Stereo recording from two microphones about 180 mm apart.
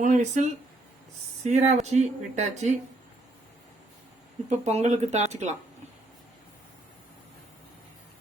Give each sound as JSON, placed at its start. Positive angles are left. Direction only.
{"t": 0.0, "sound": "speech", "side_deg": -40}
{"t": 1.5, "sound": "speech", "side_deg": -40}
{"t": 4.4, "sound": "speech", "side_deg": -40}